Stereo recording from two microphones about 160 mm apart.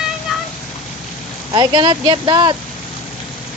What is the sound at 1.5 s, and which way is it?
Speech, 30° right (ahead or behind).